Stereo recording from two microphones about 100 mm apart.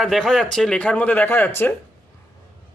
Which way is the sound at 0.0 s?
Centre (ahead or behind).